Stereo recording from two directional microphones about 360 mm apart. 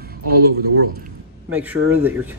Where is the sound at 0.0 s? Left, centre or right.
Right.